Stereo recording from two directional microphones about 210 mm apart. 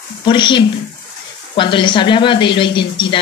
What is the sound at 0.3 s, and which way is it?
Speech, 20° left (ahead or behind).